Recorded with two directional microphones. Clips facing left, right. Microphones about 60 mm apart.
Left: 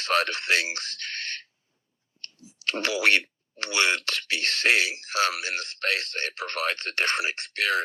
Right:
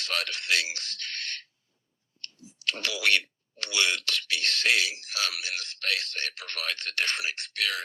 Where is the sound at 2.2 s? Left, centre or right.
Left.